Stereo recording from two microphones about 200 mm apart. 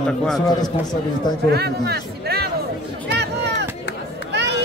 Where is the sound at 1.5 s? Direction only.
55° right (ahead or behind).